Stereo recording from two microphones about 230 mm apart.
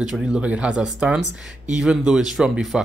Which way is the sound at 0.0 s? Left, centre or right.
Centre.